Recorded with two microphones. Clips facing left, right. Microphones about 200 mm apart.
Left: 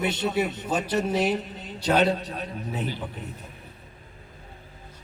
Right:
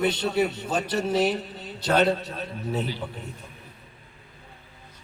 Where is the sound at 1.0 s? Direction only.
40° right (ahead or behind).